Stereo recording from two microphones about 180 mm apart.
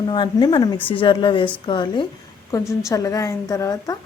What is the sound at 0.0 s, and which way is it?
A woman's voice, 25° left (ahead or behind).